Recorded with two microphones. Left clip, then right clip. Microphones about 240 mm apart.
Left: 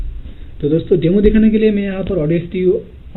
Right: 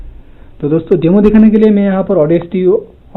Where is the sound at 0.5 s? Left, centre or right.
Right.